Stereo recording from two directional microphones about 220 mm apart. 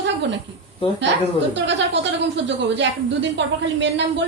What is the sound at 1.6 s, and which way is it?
Speech, 55° right (ahead or behind).